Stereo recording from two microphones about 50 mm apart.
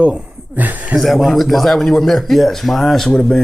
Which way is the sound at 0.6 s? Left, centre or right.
Right.